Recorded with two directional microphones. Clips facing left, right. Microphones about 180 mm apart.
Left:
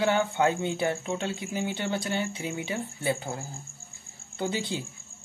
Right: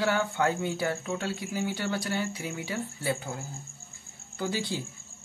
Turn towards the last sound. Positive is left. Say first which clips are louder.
# left 1 dB
turn(degrees=20)  # may be behind; listen again after turning